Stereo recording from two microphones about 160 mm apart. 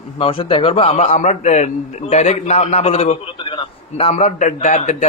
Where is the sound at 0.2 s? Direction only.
35° left (ahead or behind).